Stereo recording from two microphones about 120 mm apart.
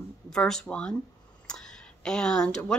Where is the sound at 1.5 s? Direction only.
5° left (ahead or behind).